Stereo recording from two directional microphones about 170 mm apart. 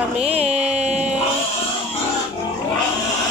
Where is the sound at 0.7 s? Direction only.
40° right (ahead or behind).